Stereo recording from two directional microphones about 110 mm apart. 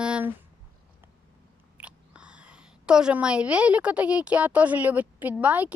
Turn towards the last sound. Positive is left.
turn(degrees=-15)  # may be behind; listen again after turning